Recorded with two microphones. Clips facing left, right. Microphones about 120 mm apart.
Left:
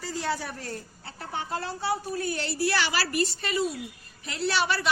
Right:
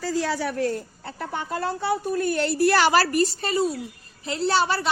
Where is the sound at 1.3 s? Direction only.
50° right (ahead or behind); by 4.9 s 35° right (ahead or behind).